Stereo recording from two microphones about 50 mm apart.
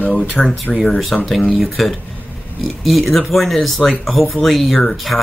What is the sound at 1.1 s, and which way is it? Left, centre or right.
Speech, centre.